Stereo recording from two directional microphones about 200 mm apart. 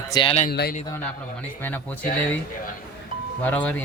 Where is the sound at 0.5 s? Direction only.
55° left (ahead or behind).